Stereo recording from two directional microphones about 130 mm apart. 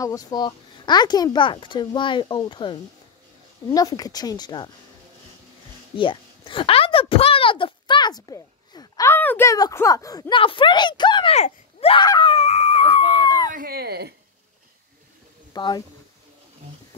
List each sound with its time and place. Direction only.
0.0 s speech: 25° left (ahead or behind)
5.9 s a sound: 40° left (ahead or behind)
9.1 s a sound: 15° left (ahead or behind)
9.5 s speech: 25° left (ahead or behind)
10.3 s speech: 40° left (ahead or behind)
11.3 s speech: 50° left (ahead or behind)
12.0 s speech: 35° left (ahead or behind)
15.5 s speech: 30° left (ahead or behind)